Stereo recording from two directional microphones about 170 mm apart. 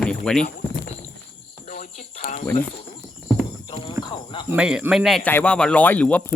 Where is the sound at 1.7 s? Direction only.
45° left (ahead or behind).